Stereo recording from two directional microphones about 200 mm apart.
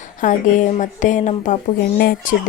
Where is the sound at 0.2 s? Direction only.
40° left (ahead or behind).